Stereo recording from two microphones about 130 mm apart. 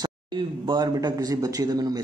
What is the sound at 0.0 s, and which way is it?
A man's voice, 35° right (ahead or behind).